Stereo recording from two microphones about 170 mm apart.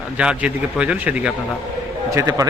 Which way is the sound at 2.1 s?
20° right (ahead or behind).